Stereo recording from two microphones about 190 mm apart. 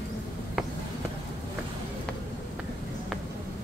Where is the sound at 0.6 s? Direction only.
Centre (ahead or behind).